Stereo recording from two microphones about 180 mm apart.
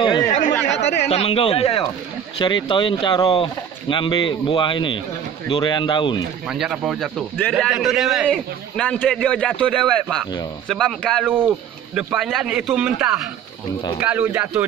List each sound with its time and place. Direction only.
0.0 s chatter: 25° left (ahead or behind)
0.7 s a sound: 75° left (ahead or behind)
1.0 s speech: 35° left (ahead or behind)
6.4 s a man's voice: 5° right (ahead or behind)
11.2 s a man's voice: 10° right (ahead or behind)